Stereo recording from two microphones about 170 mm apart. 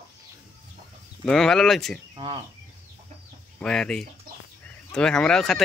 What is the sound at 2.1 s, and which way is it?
Speech, 30° right (ahead or behind).